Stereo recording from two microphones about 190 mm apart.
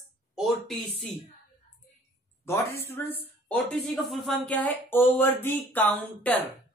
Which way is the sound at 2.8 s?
10° left (ahead or behind).